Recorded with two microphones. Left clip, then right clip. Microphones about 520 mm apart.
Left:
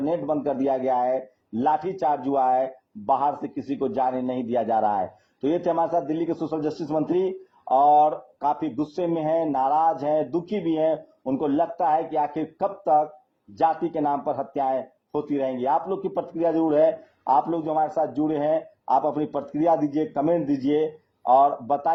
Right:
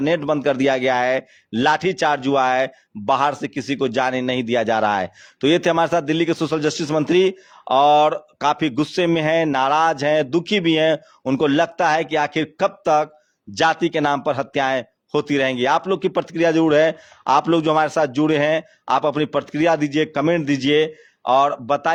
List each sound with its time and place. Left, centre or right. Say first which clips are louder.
0.3 s a man's voice: right 6 dB; right
3.8 s a man's voice: right 4 dB; right
21.2 s a man's voice: right 2 dB; right